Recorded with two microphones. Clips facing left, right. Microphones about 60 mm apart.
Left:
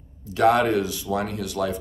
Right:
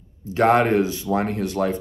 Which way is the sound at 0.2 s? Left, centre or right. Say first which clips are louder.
Right 2 dB; right.